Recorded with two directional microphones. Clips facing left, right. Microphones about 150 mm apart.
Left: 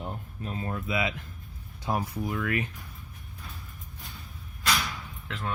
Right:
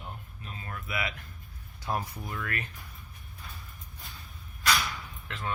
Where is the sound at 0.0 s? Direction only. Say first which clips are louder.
Left 7 dB; 40° left (ahead or behind).